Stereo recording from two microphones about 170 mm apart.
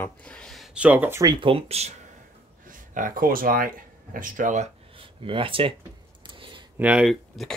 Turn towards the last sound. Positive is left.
turn(degrees=-5)  # may be behind; listen again after turning